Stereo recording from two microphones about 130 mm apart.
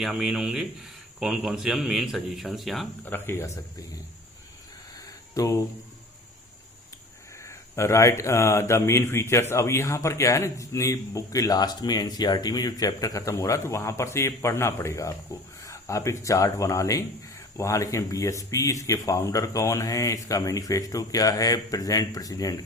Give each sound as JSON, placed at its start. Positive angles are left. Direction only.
{"t": 0.0, "sound": "speech", "side_deg": -5}
{"t": 3.0, "sound": "speech", "side_deg": 15}
{"t": 5.3, "sound": "speech", "side_deg": 25}
{"t": 7.3, "sound": "speech", "side_deg": 20}